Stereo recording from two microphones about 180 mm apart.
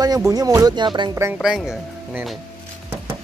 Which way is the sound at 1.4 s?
Centre (ahead or behind).